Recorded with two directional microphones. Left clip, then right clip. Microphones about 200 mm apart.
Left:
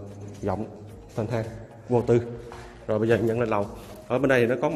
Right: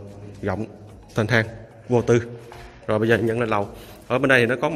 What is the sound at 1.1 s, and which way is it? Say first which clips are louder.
Speech: right 9 dB; 20° right (ahead or behind).